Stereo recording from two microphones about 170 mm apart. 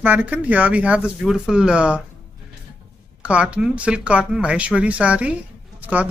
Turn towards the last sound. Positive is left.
turn(degrees=-10)  # may be behind; listen again after turning